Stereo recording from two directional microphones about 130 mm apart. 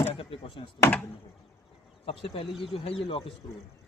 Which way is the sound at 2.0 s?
50° left (ahead or behind).